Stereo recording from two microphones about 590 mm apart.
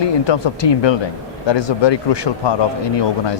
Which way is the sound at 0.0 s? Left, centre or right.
Left.